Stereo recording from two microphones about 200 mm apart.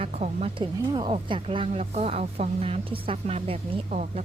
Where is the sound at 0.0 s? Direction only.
35° right (ahead or behind).